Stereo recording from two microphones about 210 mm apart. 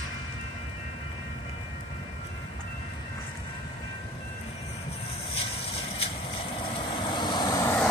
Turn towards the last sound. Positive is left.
turn(degrees=20)  # may be behind; listen again after turning